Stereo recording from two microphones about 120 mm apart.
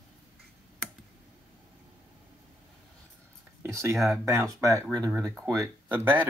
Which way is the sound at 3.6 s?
20° right (ahead or behind).